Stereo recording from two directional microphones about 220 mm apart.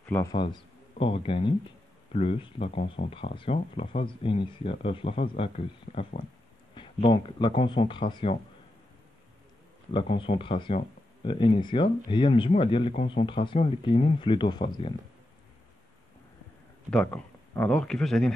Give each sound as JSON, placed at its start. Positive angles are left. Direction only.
{"t": 0.0, "sound": "a man's voice", "side_deg": 10}
{"t": 0.3, "sound": "speech", "side_deg": 20}
{"t": 9.9, "sound": "speech", "side_deg": 25}
{"t": 16.9, "sound": "speech", "side_deg": 5}